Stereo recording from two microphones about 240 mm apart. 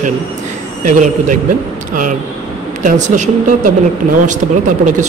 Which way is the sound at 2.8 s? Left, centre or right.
Right.